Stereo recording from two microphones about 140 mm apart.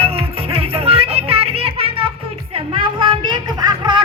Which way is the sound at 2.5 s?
35° right (ahead or behind).